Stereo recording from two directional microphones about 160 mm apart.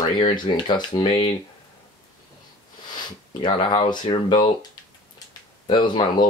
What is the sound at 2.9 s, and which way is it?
Speech, 30° left (ahead or behind).